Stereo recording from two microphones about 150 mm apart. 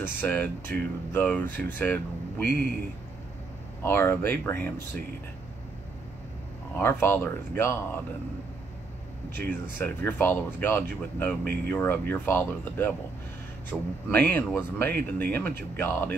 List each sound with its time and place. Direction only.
0.0 s speech: 10° left (ahead or behind)
3.8 s speech: 15° left (ahead or behind)
6.8 s speech: 15° left (ahead or behind)
9.4 s speech: 10° left (ahead or behind)